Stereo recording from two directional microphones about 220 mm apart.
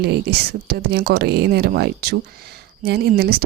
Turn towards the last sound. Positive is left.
turn(degrees=-45)  # may be behind; listen again after turning